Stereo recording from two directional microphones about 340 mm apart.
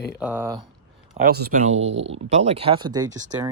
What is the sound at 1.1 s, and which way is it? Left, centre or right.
Speech, right.